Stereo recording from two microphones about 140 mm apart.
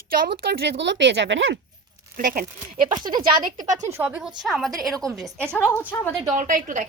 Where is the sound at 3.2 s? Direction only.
70° right (ahead or behind).